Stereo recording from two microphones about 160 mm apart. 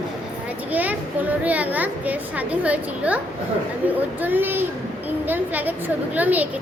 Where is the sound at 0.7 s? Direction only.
10° right (ahead or behind).